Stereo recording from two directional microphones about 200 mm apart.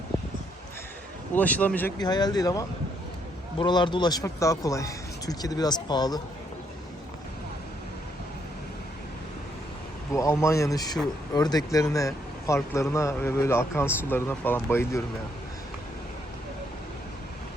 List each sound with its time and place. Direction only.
1.4 s a man's voice: 10° left (ahead or behind)
2.0 s speech: 20° left (ahead or behind)
10.1 s a man's voice: 15° left (ahead or behind)